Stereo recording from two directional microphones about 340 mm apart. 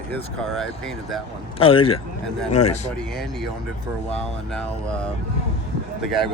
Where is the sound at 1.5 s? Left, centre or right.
Centre.